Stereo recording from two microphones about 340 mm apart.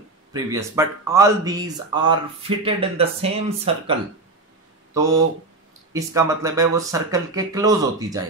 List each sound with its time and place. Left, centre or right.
0.3 s speech: centre
4.9 s speech: centre